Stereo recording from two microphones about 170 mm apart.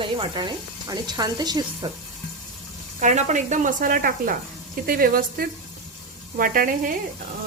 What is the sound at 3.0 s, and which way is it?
Speech, 45° right (ahead or behind).